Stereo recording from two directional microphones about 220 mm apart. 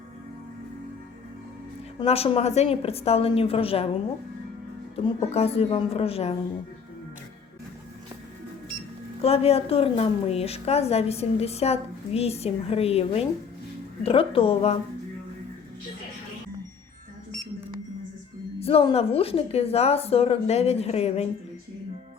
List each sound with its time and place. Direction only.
2.0 s a woman's voice: 25° left (ahead or behind)
4.9 s a woman's voice: 25° left (ahead or behind)
9.2 s a woman's voice: 30° left (ahead or behind)
18.6 s a woman's voice: 25° left (ahead or behind)